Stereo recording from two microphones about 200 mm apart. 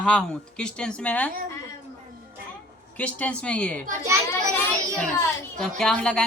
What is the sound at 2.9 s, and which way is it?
Speech, 5° left (ahead or behind).